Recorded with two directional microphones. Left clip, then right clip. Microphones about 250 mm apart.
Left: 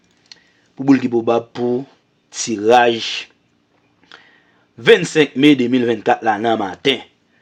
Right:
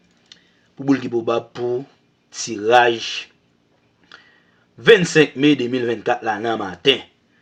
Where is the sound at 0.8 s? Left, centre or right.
Left.